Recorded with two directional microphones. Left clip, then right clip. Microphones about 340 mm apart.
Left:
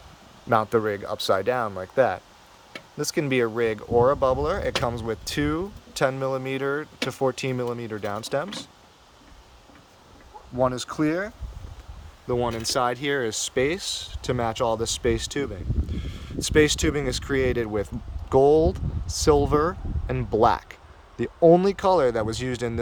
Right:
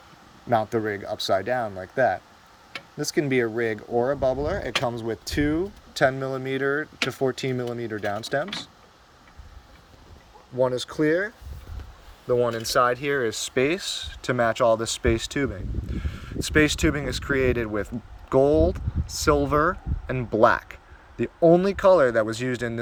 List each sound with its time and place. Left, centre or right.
0.5 s speech: centre
12.3 s speech: centre